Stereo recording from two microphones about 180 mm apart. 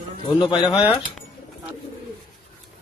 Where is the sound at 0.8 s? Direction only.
5° right (ahead or behind).